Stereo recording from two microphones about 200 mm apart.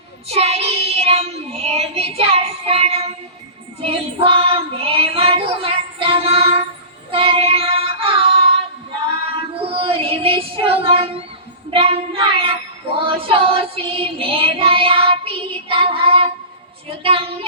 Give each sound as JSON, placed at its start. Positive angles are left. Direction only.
{"t": 0.3, "sound": "child singing", "side_deg": -30}
{"t": 9.2, "sound": "female singing", "side_deg": -30}
{"t": 11.7, "sound": "child singing", "side_deg": -30}